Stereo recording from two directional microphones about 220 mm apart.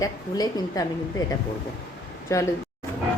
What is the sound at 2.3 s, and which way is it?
Speech, 15° left (ahead or behind).